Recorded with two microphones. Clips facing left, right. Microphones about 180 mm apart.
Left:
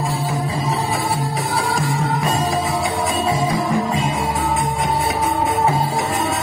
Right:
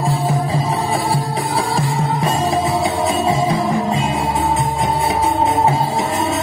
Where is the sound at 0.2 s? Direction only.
30° right (ahead or behind).